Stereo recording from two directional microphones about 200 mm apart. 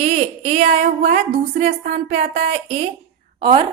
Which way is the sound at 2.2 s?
30° right (ahead or behind).